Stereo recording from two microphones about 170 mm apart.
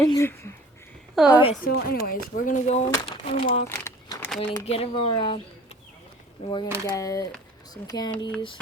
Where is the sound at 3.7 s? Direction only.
15° left (ahead or behind).